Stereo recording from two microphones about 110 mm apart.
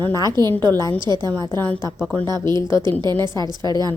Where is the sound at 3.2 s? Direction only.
40° right (ahead or behind).